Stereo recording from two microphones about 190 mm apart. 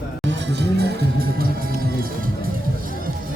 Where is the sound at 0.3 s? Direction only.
70° right (ahead or behind).